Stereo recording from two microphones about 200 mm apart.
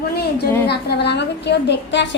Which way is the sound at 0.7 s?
55° left (ahead or behind).